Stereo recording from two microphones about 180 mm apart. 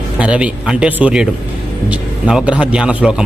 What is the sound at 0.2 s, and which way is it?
A man's voice, 5° right (ahead or behind).